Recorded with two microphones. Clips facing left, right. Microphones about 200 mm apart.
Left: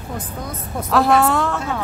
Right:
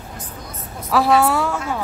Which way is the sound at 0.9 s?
Centre (ahead or behind).